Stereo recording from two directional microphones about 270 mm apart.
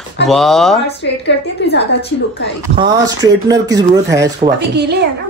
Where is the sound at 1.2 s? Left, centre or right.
Left.